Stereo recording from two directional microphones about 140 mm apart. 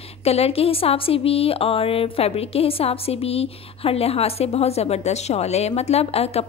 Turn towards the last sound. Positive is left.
turn(degrees=45)  # may be behind; listen again after turning